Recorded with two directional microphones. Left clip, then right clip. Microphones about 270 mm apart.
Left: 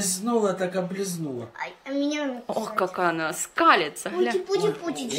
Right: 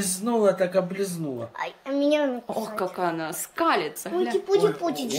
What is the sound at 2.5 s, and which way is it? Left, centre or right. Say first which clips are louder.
Speech: left 2 dB; centre.